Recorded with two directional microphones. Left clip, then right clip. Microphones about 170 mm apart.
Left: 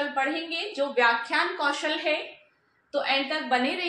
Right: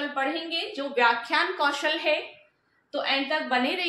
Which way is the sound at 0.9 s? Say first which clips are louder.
Right 1 dB; 30° right (ahead or behind).